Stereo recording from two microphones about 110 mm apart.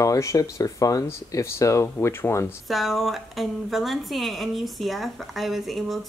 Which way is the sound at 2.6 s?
Centre (ahead or behind).